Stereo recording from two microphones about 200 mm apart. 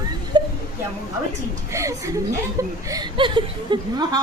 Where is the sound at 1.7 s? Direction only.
15° right (ahead or behind).